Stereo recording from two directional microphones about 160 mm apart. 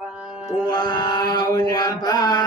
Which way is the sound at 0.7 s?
25° left (ahead or behind).